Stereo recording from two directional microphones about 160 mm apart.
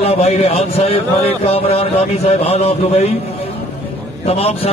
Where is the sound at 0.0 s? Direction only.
40° left (ahead or behind).